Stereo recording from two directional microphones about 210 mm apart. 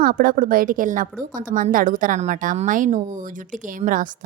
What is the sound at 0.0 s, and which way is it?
A woman's voice, 45° right (ahead or behind).